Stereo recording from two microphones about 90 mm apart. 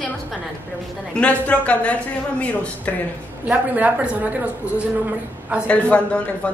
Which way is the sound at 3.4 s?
15° right (ahead or behind).